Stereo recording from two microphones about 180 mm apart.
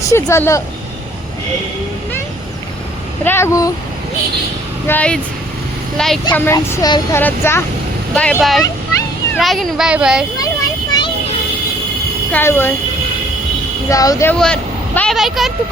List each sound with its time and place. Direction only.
0.0 s speech: 15° left (ahead or behind)
3.2 s speech: 15° left (ahead or behind)
4.9 s a child's voice: 5° left (ahead or behind)
10.3 s a sound: 20° left (ahead or behind)
12.3 s speech: 10° left (ahead or behind)
13.9 s speech: 20° left (ahead or behind)
14.3 s speech: 5° left (ahead or behind)